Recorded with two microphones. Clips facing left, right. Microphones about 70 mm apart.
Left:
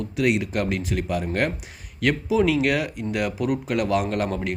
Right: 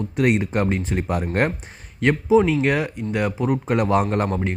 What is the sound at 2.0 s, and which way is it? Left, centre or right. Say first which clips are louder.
Speech: right 4 dB; right.